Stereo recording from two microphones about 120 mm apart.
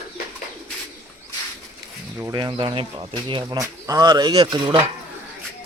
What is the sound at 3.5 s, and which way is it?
Speech, 30° right (ahead or behind).